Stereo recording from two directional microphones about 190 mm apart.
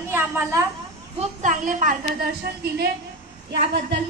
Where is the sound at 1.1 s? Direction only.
40° right (ahead or behind).